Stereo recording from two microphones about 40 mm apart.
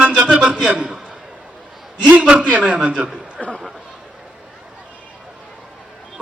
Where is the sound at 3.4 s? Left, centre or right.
Centre.